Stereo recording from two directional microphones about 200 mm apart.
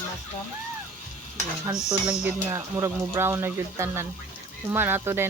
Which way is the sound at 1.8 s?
5° right (ahead or behind).